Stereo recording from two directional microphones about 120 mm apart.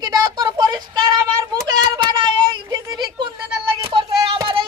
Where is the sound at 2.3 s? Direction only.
40° right (ahead or behind).